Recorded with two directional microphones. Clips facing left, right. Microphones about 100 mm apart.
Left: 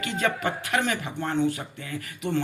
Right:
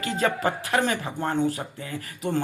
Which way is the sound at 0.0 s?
35° right (ahead or behind).